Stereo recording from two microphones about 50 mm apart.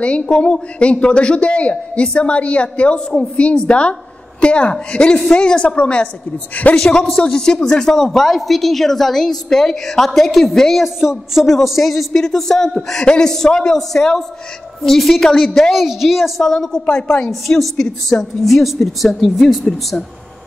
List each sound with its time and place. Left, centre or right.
0.0 s a woman's voice: left
10.8 s a woman's voice: centre
16.4 s a woman's voice: centre
17.3 s a woman's voice: centre